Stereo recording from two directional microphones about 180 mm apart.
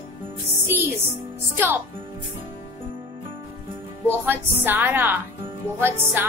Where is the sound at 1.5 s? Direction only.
10° right (ahead or behind).